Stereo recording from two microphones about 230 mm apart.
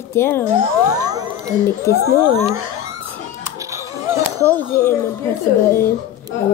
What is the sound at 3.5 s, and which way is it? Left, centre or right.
Music, centre.